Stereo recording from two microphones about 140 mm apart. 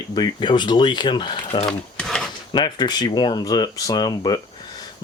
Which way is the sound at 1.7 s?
5° left (ahead or behind).